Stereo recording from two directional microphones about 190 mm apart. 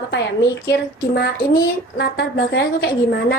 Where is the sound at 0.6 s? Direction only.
60° left (ahead or behind).